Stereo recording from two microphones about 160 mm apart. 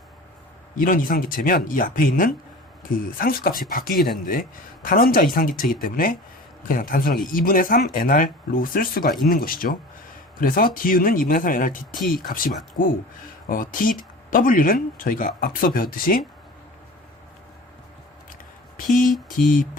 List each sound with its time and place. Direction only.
0.8 s speech: 60° left (ahead or behind)